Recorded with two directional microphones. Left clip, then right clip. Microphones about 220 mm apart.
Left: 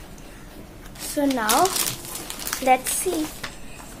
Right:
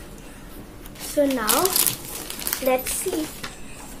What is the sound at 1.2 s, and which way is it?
Speech, 25° left (ahead or behind).